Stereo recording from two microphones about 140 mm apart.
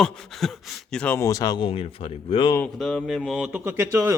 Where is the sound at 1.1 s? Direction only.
25° left (ahead or behind).